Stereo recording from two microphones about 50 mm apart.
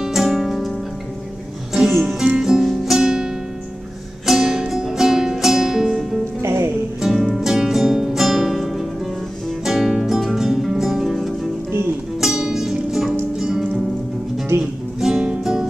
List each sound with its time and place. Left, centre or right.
0.0 s music: centre
1.7 s music: centre
2.6 s music: centre
4.3 s music: centre
6.4 s music: right
7.0 s music: centre